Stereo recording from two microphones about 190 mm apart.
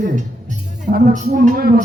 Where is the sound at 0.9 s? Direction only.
40° right (ahead or behind).